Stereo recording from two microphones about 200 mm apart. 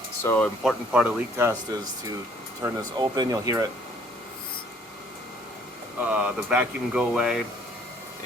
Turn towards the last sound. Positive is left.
turn(degrees=0)  # may be behind; listen again after turning